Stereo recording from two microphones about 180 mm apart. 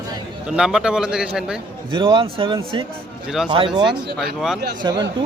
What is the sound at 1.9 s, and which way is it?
A man's voice, 30° right (ahead or behind).